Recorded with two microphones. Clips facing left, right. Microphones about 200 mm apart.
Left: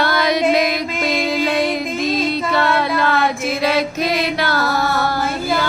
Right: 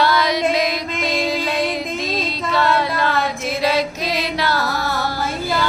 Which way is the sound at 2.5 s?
55° left (ahead or behind).